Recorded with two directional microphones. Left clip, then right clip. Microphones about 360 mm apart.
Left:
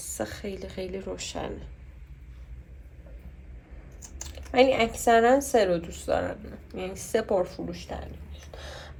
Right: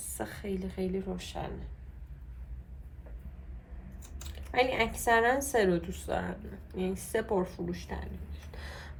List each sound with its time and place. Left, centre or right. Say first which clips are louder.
0.2 s a woman's voice: left 3 dB; left
4.5 s a woman's voice: left 7 dB; left